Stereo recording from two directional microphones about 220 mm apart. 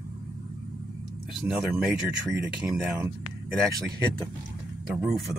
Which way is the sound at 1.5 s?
Centre (ahead or behind).